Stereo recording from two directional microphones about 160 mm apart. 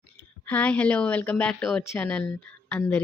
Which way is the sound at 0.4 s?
10° left (ahead or behind).